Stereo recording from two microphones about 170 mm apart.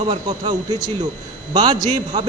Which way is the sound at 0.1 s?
25° right (ahead or behind).